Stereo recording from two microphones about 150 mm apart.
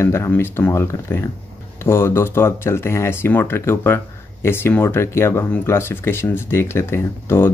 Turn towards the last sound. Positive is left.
turn(degrees=15)  # may be behind; listen again after turning